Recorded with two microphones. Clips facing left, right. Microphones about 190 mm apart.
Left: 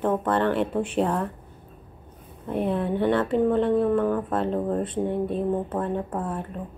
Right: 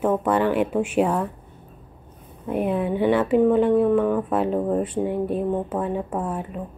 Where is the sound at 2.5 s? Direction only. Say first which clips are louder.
Right 2 dB; 10° right (ahead or behind).